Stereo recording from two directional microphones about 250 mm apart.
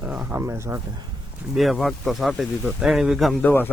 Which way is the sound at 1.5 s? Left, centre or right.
Centre.